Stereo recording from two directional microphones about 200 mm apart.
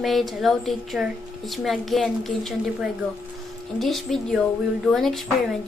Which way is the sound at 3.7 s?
Centre (ahead or behind).